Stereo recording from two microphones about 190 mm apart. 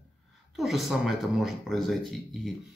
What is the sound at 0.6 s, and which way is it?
Speech, centre (ahead or behind).